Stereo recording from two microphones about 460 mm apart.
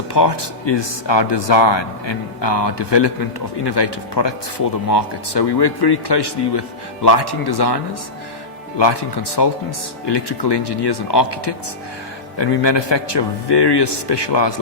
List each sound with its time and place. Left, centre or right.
0.1 s speech: left
8.8 s speech: left